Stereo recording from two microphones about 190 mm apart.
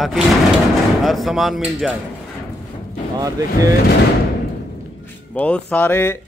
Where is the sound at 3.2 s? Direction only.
15° right (ahead or behind).